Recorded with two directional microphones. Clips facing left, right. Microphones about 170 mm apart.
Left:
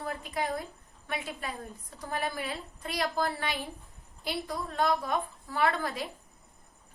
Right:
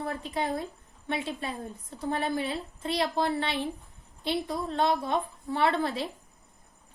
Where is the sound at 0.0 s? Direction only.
25° right (ahead or behind).